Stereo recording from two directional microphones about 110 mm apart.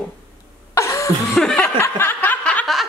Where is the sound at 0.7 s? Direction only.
25° left (ahead or behind).